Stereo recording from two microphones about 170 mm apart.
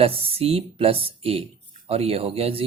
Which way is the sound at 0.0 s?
35° right (ahead or behind).